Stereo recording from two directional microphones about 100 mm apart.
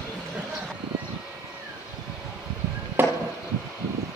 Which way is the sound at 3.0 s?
20° right (ahead or behind).